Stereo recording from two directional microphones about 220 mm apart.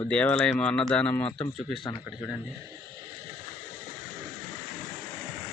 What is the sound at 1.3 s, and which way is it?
A man's voice, 20° left (ahead or behind).